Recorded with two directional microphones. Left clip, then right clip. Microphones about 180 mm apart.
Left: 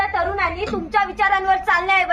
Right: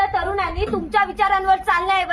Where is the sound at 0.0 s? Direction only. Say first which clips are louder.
Even; 15° right (ahead or behind).